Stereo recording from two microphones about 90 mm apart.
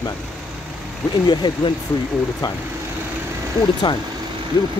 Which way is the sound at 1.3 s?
60° left (ahead or behind).